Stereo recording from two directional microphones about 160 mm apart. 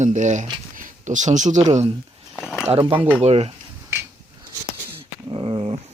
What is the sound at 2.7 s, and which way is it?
Speech, 35° right (ahead or behind).